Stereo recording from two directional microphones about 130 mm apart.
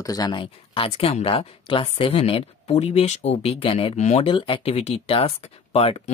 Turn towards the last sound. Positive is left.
turn(degrees=50)  # may be behind; listen again after turning